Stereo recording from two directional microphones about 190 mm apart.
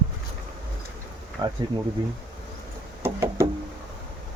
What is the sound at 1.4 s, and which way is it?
Speech, 25° right (ahead or behind).